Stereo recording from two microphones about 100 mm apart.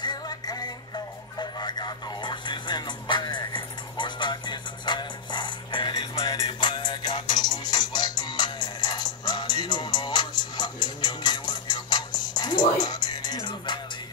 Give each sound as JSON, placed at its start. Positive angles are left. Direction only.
{"t": 0.0, "sound": "music", "side_deg": 40}